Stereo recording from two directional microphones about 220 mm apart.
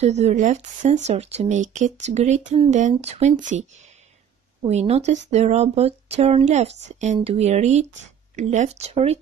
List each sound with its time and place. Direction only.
0.0 s speech: 30° right (ahead or behind)
4.6 s speech: 30° right (ahead or behind)